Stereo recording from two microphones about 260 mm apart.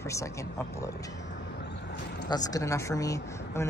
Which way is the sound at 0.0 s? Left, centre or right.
Centre.